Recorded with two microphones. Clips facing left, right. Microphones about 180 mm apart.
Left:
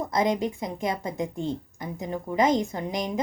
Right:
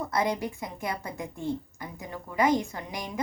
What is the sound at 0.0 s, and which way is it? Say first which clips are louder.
A woman's voice: left 4 dB; 20° left (ahead or behind).